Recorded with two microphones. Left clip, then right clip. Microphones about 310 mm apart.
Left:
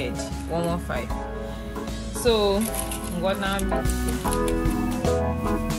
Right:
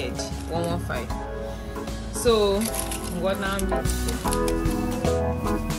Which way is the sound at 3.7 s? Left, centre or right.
Centre.